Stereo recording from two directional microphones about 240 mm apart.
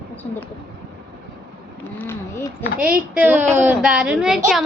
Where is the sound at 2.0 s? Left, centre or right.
Centre.